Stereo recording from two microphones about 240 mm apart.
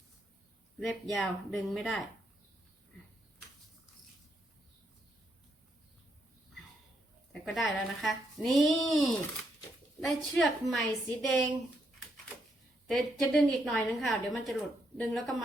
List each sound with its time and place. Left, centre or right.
0.8 s speech: centre
7.4 s speech: centre
12.9 s speech: centre